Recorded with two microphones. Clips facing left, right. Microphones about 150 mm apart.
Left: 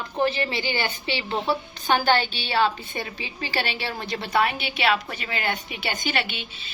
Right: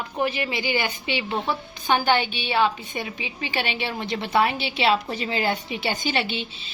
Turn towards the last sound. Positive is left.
turn(degrees=-30)  # may be behind; listen again after turning